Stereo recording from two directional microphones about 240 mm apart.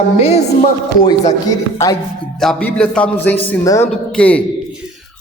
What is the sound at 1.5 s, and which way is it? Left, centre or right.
Speech, centre.